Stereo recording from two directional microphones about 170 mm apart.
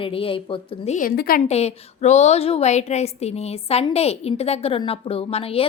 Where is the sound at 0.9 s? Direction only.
60° left (ahead or behind).